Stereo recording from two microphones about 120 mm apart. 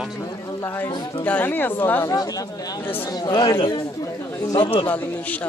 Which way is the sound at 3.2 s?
30° left (ahead or behind).